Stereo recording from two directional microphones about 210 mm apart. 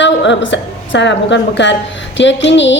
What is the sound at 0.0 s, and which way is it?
A woman's voice, 60° left (ahead or behind).